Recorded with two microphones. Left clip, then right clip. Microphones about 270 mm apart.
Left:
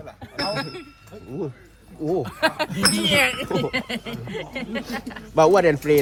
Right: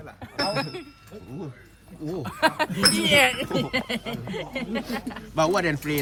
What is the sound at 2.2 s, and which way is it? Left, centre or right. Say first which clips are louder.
Speech: right 4 dB; centre.